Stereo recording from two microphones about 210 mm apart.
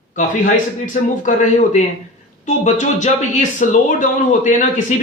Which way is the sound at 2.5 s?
35° left (ahead or behind).